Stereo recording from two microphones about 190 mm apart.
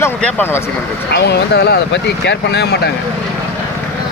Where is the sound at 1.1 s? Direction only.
60° left (ahead or behind).